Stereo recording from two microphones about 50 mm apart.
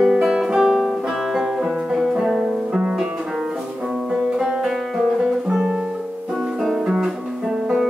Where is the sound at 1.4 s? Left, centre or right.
Centre.